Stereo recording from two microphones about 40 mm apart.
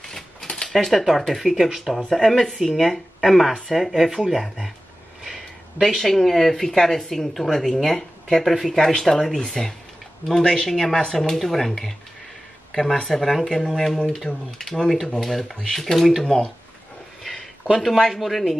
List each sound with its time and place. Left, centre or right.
0.0 s typewriter: centre
0.7 s speech: centre
2.0 s speech: centre
2.5 s speech: centre
3.9 s speech: centre
4.4 s speech: centre
5.2 s a sound: centre
5.9 s speech: centre
14.3 s speech: left
15.2 s speech: centre
17.2 s a sound: centre
17.7 s speech: centre